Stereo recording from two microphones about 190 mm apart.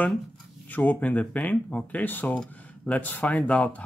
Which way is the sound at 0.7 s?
10° left (ahead or behind).